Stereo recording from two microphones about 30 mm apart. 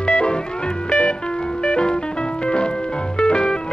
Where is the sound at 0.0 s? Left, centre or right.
Left.